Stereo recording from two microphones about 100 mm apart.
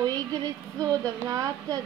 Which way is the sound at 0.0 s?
40° right (ahead or behind).